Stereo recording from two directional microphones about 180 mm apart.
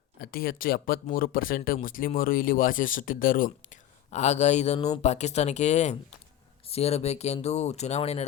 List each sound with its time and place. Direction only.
0.2 s speech: 55° left (ahead or behind); by 8.2 s 35° left (ahead or behind)